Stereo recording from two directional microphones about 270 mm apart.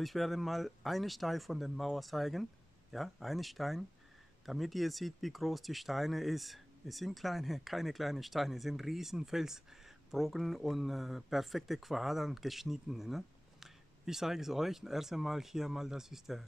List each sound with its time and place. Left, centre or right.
0.0 s speech: centre